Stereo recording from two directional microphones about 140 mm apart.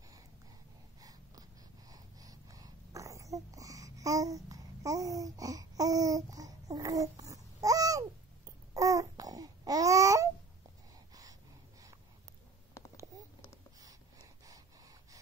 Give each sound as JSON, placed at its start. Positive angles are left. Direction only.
{"t": 1.9, "sound": "wheeze", "side_deg": -25}
{"t": 8.5, "sound": "babbling", "side_deg": -25}
{"t": 12.8, "sound": "a sound", "side_deg": 20}